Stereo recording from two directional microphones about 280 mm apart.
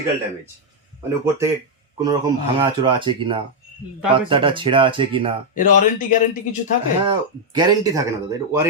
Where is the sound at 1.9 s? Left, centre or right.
Centre.